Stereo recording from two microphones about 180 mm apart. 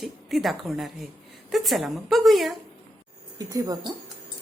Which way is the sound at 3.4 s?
20° right (ahead or behind).